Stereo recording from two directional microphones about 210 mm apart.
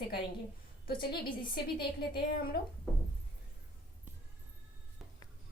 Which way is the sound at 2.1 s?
45° left (ahead or behind).